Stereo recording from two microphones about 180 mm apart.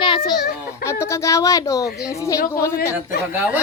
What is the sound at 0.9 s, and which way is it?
Speech, 15° left (ahead or behind).